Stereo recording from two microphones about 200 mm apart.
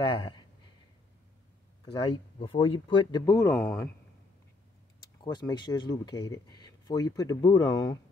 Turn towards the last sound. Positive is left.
turn(degrees=20)  # may be behind; listen again after turning